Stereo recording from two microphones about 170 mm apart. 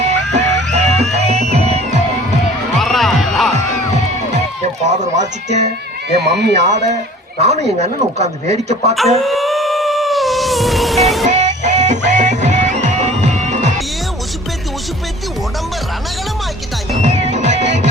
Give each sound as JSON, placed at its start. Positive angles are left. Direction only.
{"t": 0.3, "sound": "music", "side_deg": -40}
{"t": 2.8, "sound": "music", "side_deg": 0}
{"t": 4.9, "sound": "speech", "side_deg": -45}
{"t": 6.1, "sound": "speech", "side_deg": -75}
{"t": 7.4, "sound": "speech", "side_deg": -40}
{"t": 9.0, "sound": "music", "side_deg": 0}
{"t": 11.3, "sound": "music", "side_deg": -45}
{"t": 17.0, "sound": "music", "side_deg": -45}